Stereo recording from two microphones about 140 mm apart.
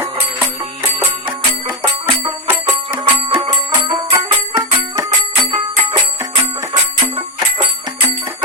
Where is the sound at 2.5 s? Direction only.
15° right (ahead or behind).